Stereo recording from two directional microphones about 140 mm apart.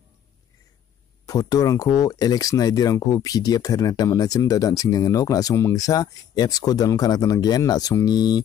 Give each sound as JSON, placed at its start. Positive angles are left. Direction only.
{"t": 1.2, "sound": "speech", "side_deg": 25}